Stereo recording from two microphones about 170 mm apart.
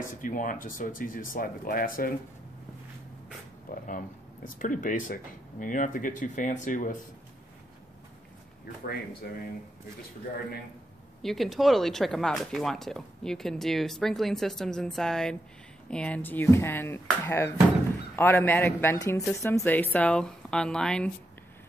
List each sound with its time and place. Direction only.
0.0 s speech: 50° left (ahead or behind)
3.8 s speech: 50° left (ahead or behind)
9.2 s speech: 65° left (ahead or behind)
11.2 s speech: centre (ahead or behind)